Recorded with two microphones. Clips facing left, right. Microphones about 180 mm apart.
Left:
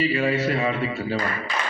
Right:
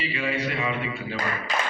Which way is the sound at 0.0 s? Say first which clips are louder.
Left 6 dB; 45° left (ahead or behind).